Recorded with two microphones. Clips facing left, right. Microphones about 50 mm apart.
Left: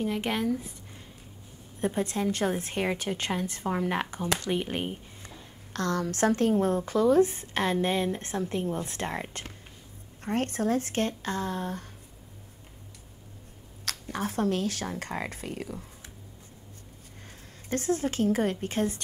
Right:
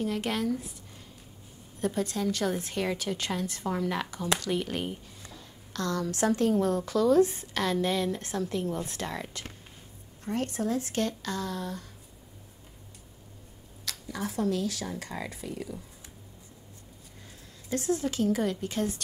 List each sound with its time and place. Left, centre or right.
0.0 s speech: centre
1.8 s a woman's voice: left
5.7 s a woman's voice: left
13.8 s speech: left
17.6 s speech: left